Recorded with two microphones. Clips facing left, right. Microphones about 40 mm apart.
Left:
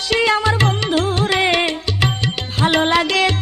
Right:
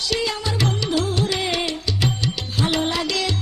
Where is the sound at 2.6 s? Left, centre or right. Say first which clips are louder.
Left 8 dB; left.